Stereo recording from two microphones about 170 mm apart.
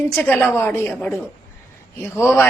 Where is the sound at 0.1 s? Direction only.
5° left (ahead or behind).